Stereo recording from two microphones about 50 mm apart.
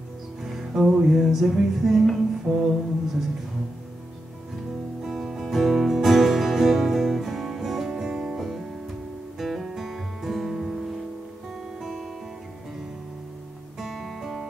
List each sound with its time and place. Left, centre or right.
0.4 s music: centre
5.0 s music: centre
9.4 s guitar: centre
13.7 s music: centre